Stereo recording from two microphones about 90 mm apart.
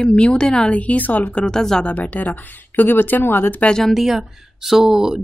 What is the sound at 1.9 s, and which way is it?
Speech, 20° left (ahead or behind).